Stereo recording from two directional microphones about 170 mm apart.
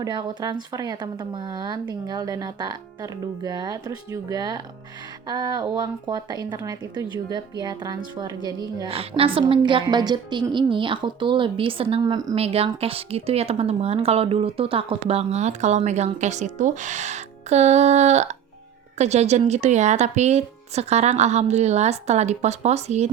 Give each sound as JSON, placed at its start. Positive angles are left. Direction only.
{"t": 0.0, "sound": "a woman's voice", "side_deg": -25}
{"t": 8.9, "sound": "a woman's voice", "side_deg": -35}